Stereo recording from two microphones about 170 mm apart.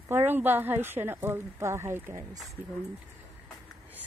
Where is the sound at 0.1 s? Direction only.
10° right (ahead or behind).